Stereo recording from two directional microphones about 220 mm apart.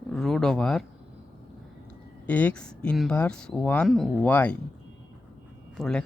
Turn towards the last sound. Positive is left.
turn(degrees=5)  # may be behind; listen again after turning